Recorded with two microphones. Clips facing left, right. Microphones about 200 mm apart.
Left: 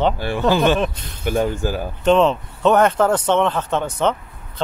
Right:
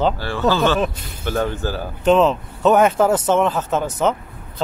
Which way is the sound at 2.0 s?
Centre (ahead or behind).